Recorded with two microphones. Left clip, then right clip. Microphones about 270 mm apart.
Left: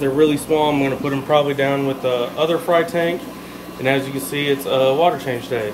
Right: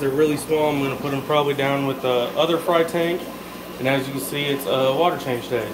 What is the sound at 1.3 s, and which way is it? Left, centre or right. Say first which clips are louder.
Speech: left 3 dB; centre.